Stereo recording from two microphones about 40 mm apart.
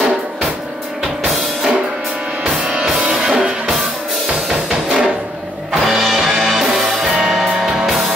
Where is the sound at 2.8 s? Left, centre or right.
Centre.